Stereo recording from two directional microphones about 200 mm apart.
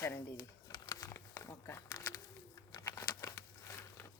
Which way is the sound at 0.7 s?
20° left (ahead or behind).